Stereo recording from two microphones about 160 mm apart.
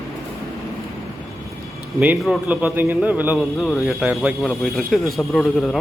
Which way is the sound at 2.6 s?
15° right (ahead or behind).